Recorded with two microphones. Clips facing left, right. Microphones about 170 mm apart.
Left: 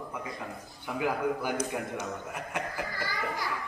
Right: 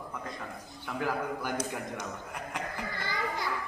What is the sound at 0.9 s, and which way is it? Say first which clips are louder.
Speech: left 3 dB; 10° left (ahead or behind).